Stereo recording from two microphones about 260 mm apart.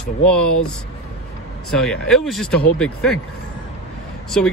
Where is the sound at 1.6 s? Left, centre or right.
Centre.